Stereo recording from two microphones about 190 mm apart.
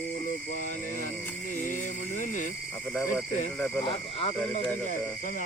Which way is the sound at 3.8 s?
30° left (ahead or behind).